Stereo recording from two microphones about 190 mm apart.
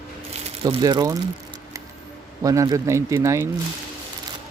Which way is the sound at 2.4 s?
15° right (ahead or behind).